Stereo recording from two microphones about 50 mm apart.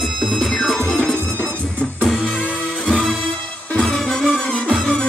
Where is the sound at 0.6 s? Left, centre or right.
Centre.